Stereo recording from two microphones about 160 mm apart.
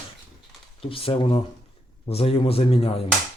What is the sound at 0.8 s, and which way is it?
Speech, 35° left (ahead or behind).